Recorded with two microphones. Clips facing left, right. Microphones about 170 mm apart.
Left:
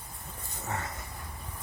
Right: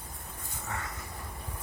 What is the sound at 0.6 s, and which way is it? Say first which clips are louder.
Vehicle: left 3 dB; 35° left (ahead or behind).